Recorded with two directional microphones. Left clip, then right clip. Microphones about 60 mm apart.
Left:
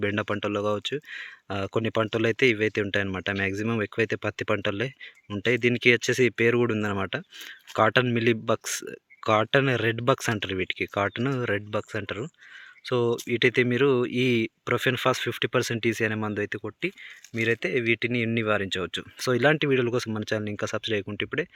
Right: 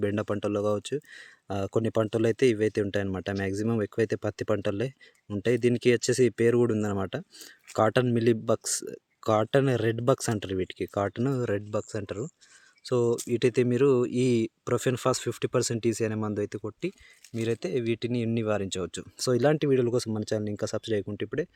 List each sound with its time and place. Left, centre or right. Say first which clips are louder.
0.0 s speech: left 2 dB; right
13.1 s speech: left 1 dB; right
13.4 s speech: left 2 dB; right
17.4 s speech: left 4 dB; centre; by 21.1 s right